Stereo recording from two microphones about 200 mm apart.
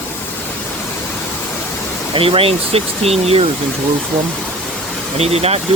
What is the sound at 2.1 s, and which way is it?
Speech, 30° right (ahead or behind).